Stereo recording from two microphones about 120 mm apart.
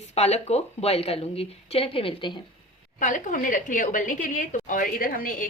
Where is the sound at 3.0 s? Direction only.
90° left.